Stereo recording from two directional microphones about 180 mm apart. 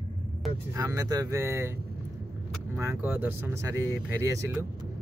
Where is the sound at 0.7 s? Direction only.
15° right (ahead or behind).